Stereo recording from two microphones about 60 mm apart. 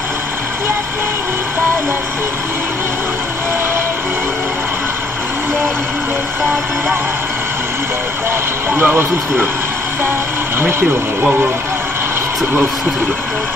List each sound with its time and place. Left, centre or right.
8.7 s speech: right